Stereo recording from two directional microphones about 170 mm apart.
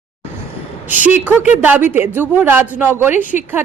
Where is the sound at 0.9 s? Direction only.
10° right (ahead or behind).